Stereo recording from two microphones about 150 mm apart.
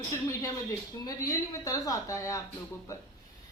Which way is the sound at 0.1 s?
20° left (ahead or behind).